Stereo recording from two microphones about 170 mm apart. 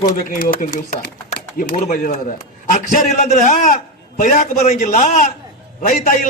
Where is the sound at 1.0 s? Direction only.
65° left (ahead or behind).